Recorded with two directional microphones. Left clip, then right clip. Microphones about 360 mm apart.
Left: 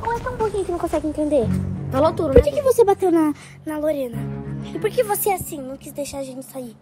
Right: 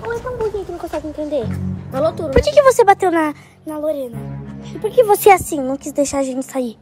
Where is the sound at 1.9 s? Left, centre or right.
Left.